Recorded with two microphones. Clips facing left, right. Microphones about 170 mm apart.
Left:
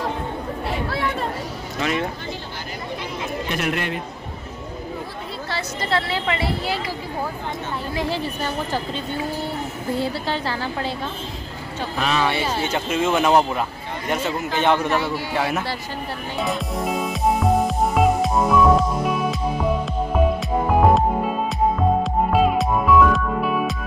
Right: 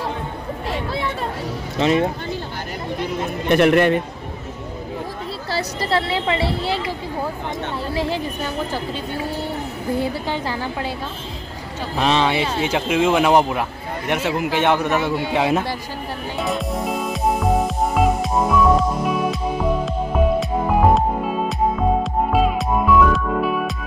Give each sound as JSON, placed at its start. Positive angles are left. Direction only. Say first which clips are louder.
{"t": 1.8, "sound": "a woman's voice", "louder": "right 6 dB", "side_deg": -30}
{"t": 3.0, "sound": "a sound", "louder": "right 5 dB", "side_deg": -55}
{"t": 5.5, "sound": "a woman's voice", "louder": "right 3 dB", "side_deg": -35}
{"t": 7.9, "sound": "a woman's voice", "louder": "right 2 dB", "side_deg": -25}
{"t": 9.9, "sound": "a man's voice", "louder": "right 1 dB", "side_deg": -15}
{"t": 12.0, "sound": "speech", "louder": "right 4 dB", "side_deg": -30}
{"t": 12.6, "sound": "a man's voice", "louder": "right 5 dB", "side_deg": -10}
{"t": 15.1, "sound": "a woman's voice", "louder": "right 4 dB", "side_deg": -20}
{"t": 16.3, "sound": "music", "louder": "right 1 dB", "side_deg": 0}
{"t": 20.3, "sound": "music", "louder": "right 1 dB", "side_deg": 0}
{"t": 22.0, "sound": "music", "louder": "even", "side_deg": 0}